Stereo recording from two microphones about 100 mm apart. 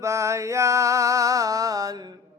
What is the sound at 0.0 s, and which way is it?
Music, 30° right (ahead or behind).